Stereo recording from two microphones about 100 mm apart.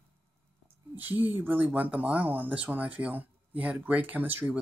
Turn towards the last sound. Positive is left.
turn(degrees=-20)  # may be behind; listen again after turning